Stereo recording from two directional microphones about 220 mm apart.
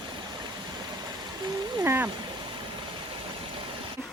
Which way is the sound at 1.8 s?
15° right (ahead or behind).